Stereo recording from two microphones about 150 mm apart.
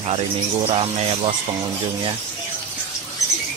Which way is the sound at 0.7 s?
40° right (ahead or behind).